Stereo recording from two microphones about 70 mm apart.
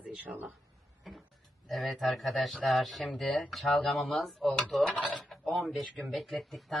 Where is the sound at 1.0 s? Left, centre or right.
Centre.